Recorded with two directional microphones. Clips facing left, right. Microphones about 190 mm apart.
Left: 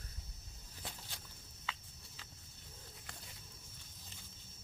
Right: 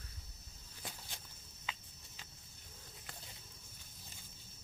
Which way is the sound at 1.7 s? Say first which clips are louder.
Left 1 dB; 15° right (ahead or behind).